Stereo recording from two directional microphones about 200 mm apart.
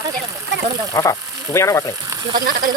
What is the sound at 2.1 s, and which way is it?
Speech, 20° right (ahead or behind).